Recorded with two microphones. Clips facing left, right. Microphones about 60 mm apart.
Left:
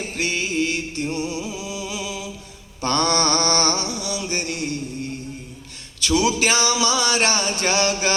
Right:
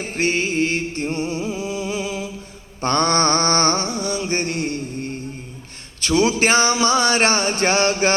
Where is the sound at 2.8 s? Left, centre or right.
Right.